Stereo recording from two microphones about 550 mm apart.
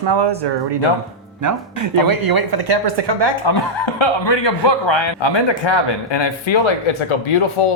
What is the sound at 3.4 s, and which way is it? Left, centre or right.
A man's voice, left.